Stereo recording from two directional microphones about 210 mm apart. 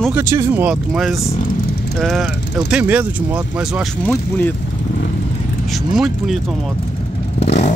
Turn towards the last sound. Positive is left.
turn(degrees=30)  # may be behind; listen again after turning